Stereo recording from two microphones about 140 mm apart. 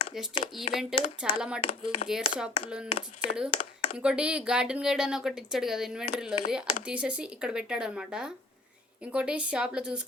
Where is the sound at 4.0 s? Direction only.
5° right (ahead or behind).